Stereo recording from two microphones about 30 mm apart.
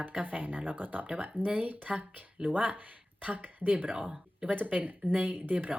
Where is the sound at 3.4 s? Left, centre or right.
Right.